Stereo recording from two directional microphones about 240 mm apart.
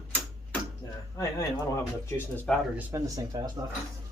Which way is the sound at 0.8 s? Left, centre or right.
Centre.